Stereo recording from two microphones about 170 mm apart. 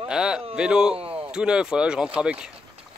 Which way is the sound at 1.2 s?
5° right (ahead or behind).